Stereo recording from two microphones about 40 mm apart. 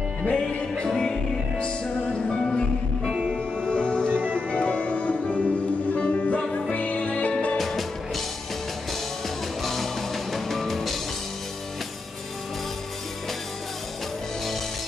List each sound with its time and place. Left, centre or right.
0.2 s music: left
0.8 s music: centre
3.7 s music: left
4.1 s music: right
4.5 s music: left
7.5 s music: centre
9.6 s music: centre